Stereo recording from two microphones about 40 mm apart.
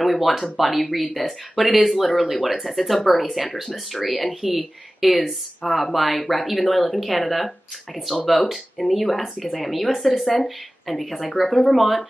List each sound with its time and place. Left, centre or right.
0.0 s speech: centre
5.7 s speech: centre